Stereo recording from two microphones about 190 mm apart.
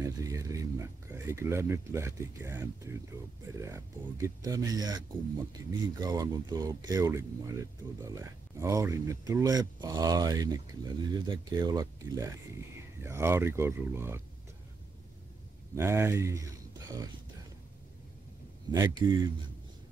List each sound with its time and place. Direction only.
0.0 s speech: 15° right (ahead or behind)
15.7 s speech: 15° right (ahead or behind)
18.7 s speech: 20° right (ahead or behind)